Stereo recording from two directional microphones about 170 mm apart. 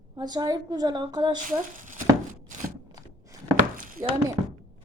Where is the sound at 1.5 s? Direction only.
50° right (ahead or behind).